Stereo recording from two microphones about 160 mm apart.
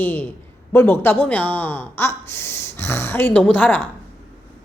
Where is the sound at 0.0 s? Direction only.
10° left (ahead or behind).